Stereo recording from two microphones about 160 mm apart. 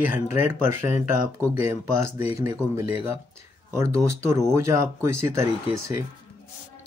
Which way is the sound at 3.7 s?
20° right (ahead or behind).